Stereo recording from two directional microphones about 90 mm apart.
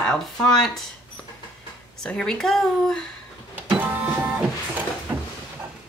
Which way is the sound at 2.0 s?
10° left (ahead or behind).